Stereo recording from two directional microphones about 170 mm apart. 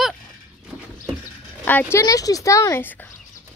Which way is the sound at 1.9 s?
20° left (ahead or behind).